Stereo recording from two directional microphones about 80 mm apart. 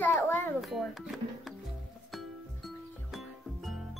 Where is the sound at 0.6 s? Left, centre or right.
Centre.